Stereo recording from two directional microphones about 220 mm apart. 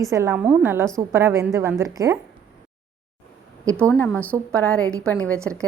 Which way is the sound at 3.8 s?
10° left (ahead or behind).